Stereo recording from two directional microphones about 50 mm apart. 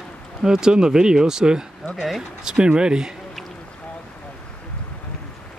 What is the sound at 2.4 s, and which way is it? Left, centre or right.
Speech, centre.